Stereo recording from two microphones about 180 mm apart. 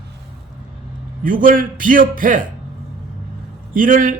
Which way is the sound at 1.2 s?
50° right (ahead or behind).